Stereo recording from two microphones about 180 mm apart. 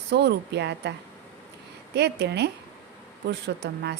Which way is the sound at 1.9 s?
70° right (ahead or behind).